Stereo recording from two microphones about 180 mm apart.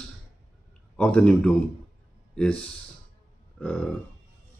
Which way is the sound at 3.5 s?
5° left (ahead or behind).